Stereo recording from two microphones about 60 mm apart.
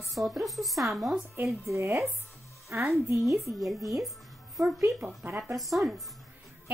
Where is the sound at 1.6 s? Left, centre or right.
Right.